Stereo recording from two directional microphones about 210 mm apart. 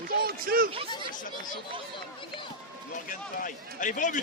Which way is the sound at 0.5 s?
45° right (ahead or behind).